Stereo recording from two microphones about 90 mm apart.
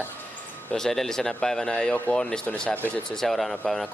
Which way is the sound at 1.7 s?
15° left (ahead or behind).